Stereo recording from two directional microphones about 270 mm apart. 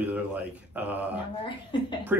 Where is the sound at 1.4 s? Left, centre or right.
Centre.